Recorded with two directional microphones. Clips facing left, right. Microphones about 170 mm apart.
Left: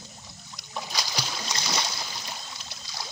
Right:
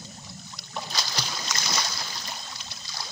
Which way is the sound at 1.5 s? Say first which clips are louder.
Left 1 dB; 30° left (ahead or behind).